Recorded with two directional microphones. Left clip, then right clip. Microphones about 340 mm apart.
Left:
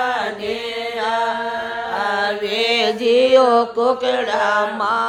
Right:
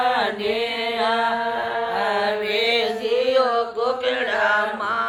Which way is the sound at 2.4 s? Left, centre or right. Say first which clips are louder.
Left 3 dB; centre.